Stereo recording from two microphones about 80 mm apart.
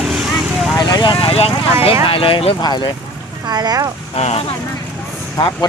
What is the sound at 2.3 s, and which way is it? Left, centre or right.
Speech, left.